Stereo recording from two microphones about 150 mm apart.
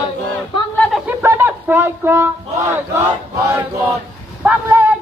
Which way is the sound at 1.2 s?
15° right (ahead or behind).